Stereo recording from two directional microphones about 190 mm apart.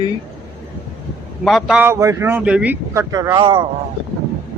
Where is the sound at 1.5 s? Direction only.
Centre (ahead or behind); by 3.6 s 25° right (ahead or behind).